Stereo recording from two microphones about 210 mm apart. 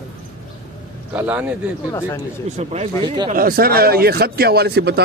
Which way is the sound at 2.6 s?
30° right (ahead or behind).